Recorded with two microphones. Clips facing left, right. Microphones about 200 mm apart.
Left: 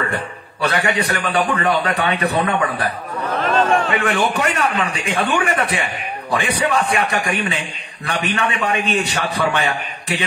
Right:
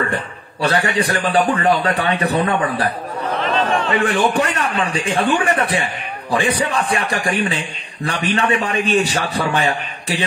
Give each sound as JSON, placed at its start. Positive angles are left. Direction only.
{"t": 0.6, "sound": "a man's voice", "side_deg": -35}
{"t": 3.3, "sound": "a sound", "side_deg": 45}
{"t": 4.4, "sound": "a man's voice", "side_deg": -30}